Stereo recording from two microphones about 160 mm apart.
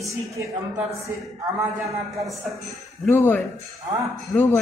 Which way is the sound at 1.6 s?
20° right (ahead or behind).